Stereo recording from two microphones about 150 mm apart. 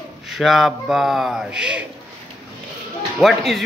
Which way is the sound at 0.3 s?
Centre (ahead or behind).